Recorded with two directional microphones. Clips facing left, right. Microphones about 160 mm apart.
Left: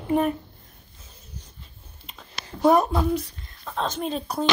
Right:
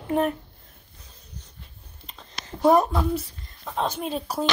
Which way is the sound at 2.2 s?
5° left (ahead or behind).